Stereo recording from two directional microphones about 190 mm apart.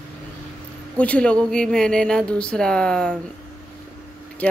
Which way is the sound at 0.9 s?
5° left (ahead or behind).